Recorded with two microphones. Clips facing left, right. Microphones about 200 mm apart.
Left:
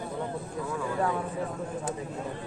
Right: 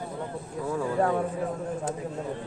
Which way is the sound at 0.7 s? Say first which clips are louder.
Right 4 dB; 40° right (ahead or behind).